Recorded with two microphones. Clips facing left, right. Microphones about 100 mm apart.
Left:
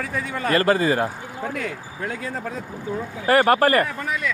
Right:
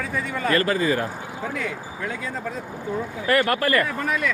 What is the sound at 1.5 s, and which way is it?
Speech, 45° left (ahead or behind).